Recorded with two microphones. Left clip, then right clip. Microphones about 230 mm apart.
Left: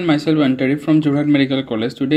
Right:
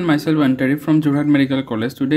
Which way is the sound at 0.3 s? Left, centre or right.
Right.